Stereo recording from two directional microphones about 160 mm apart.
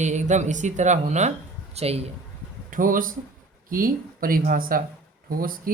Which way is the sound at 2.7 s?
60° right (ahead or behind).